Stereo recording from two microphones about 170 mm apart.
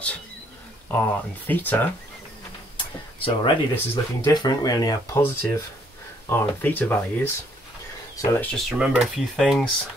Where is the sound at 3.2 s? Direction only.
30° left (ahead or behind).